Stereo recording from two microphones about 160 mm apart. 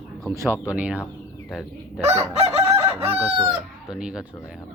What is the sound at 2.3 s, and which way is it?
Chicken, 40° right (ahead or behind).